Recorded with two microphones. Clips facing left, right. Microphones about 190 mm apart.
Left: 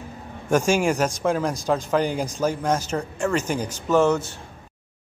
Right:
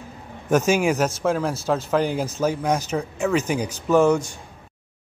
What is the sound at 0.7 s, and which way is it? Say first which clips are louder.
A man's voice: right 1 dB; 5° right (ahead or behind).